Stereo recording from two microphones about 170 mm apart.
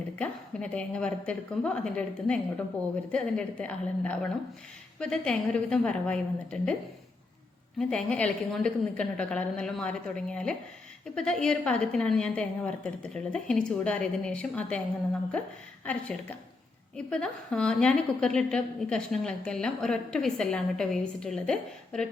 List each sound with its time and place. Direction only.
0.2 s a woman's voice: 5° left (ahead or behind)
7.8 s a woman's voice: 5° left (ahead or behind)
15.8 s a woman's voice: 10° left (ahead or behind)